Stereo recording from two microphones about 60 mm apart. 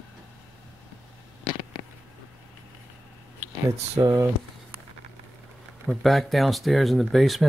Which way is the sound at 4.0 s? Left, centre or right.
Right.